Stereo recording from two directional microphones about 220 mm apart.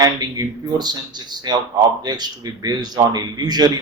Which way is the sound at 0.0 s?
20° right (ahead or behind).